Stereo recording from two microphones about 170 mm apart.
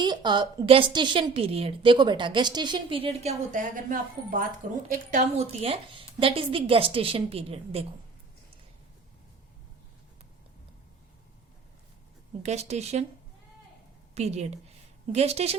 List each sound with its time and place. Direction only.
0.0 s a woman's voice: 25° right (ahead or behind)
12.4 s a woman's voice: 40° right (ahead or behind)
14.2 s a woman's voice: 40° right (ahead or behind)